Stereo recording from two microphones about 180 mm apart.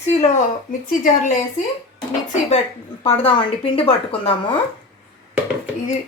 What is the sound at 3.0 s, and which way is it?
A woman's voice, 30° left (ahead or behind).